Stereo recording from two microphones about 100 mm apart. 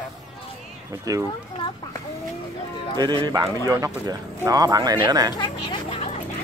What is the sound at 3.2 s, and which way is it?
Speech, 40° right (ahead or behind).